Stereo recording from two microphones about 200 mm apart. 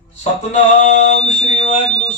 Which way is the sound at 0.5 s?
35° left (ahead or behind).